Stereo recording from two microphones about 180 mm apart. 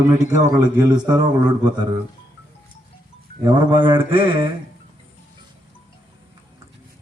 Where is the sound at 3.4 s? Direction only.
25° right (ahead or behind).